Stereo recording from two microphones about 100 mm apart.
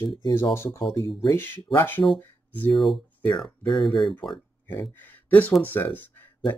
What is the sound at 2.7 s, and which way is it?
Speech, centre (ahead or behind).